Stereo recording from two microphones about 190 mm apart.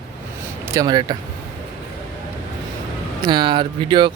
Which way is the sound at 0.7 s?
20° right (ahead or behind).